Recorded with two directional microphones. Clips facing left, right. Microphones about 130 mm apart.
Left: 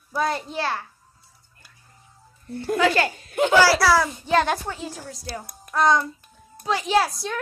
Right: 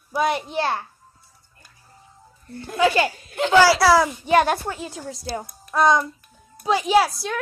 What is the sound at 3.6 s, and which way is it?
Child singing, 20° right (ahead or behind).